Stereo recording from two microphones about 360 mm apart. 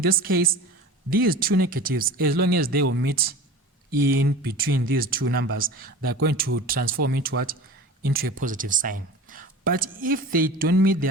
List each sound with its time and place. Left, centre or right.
0.0 s speech: right